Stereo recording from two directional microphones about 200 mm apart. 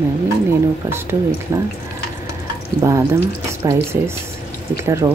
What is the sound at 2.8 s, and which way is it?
Speech, 15° right (ahead or behind).